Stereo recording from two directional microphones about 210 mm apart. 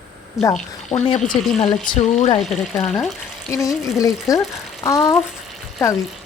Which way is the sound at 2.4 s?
Centre (ahead or behind).